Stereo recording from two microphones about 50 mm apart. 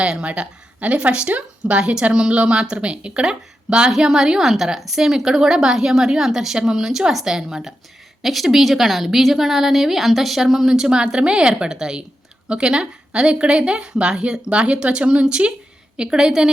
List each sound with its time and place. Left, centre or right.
0.0 s speech: right
1.8 s a woman's voice: centre